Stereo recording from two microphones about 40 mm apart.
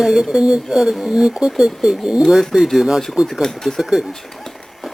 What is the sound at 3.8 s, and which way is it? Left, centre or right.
Speech, centre.